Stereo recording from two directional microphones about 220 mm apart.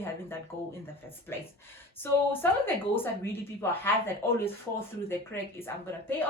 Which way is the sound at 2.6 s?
10° left (ahead or behind).